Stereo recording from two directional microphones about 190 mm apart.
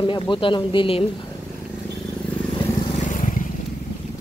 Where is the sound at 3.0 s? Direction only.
40° left (ahead or behind).